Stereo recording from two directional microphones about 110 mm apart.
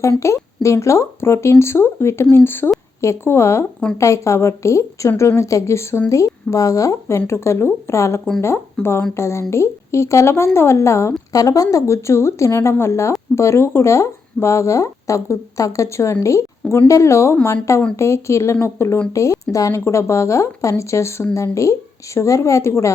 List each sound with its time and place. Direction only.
0.0 s speech: 25° left (ahead or behind)